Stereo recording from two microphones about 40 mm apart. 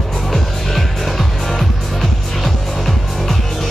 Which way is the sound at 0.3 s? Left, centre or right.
Centre.